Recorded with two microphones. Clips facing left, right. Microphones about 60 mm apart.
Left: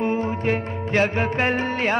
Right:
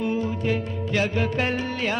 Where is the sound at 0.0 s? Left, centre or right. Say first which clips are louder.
Left 3 dB; left.